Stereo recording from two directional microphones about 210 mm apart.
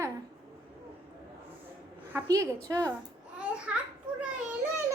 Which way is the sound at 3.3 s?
5° right (ahead or behind).